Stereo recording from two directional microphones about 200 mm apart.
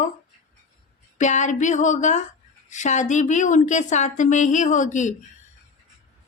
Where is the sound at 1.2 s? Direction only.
35° left (ahead or behind).